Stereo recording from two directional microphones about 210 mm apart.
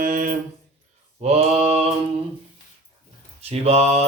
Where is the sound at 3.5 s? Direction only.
30° right (ahead or behind).